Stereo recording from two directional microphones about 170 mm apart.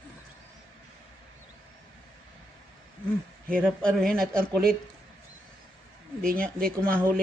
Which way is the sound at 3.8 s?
5° left (ahead or behind).